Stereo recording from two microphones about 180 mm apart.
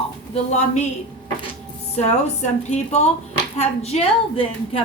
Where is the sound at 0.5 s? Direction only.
40° left (ahead or behind).